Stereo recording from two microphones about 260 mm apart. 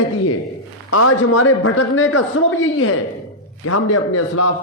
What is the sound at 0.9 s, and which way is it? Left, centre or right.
A man's voice, left.